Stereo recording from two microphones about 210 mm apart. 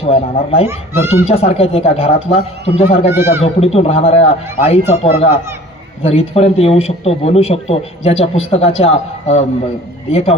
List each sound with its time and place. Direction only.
0.0 s speech: 30° left (ahead or behind)
0.7 s speech: 10° right (ahead or behind)
1.3 s speech: 30° left (ahead or behind)
3.1 s speech: 10° right (ahead or behind)
3.4 s speech: 30° left (ahead or behind)
10.1 s speech: 30° left (ahead or behind)